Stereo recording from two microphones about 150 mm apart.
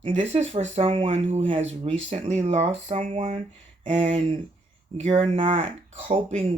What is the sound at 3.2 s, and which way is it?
Speech, 55° right (ahead or behind).